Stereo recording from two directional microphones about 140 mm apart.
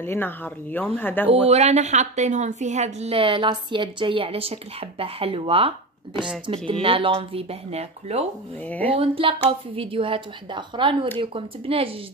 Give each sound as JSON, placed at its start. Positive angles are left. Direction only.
{"t": 0.0, "sound": "speech", "side_deg": 15}
{"t": 1.5, "sound": "a woman's voice", "side_deg": -50}
{"t": 8.6, "sound": "speech", "side_deg": 10}
{"t": 8.9, "sound": "speech", "side_deg": -40}